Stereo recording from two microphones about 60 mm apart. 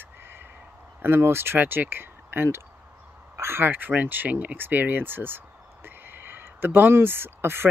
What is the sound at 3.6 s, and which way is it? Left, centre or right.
Speech, right.